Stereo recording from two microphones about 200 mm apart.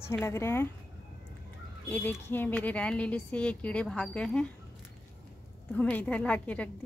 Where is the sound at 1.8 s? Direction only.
10° left (ahead or behind).